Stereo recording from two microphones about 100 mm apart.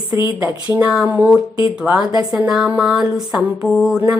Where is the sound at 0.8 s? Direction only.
10° right (ahead or behind).